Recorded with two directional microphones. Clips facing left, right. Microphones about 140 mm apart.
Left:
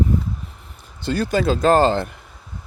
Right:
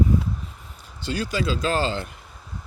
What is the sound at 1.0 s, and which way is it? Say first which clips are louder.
Speech: left 6 dB; 55° left (ahead or behind).